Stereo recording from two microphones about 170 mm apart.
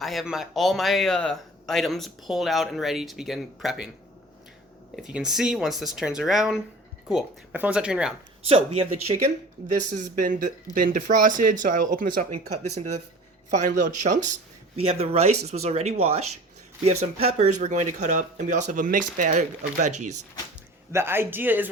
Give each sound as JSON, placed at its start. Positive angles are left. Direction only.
{"t": 0.0, "sound": "speech", "side_deg": 0}
{"t": 5.0, "sound": "speech", "side_deg": -5}
{"t": 8.4, "sound": "speech", "side_deg": -35}
{"t": 9.6, "sound": "speech", "side_deg": -50}
{"t": 13.5, "sound": "speech", "side_deg": -45}
{"t": 14.8, "sound": "speech", "side_deg": -35}
{"t": 20.9, "sound": "speech", "side_deg": -15}